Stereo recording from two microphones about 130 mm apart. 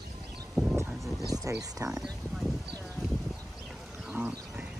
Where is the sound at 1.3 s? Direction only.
25° right (ahead or behind).